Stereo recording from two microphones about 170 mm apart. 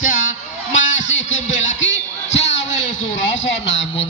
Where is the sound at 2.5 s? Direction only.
90° left.